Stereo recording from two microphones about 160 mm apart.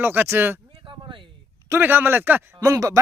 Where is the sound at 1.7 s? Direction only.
10° right (ahead or behind).